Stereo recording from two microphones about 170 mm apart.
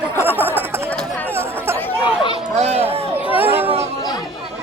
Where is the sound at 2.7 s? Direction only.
35° right (ahead or behind).